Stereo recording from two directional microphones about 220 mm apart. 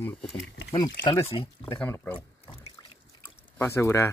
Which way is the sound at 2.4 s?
30° left (ahead or behind).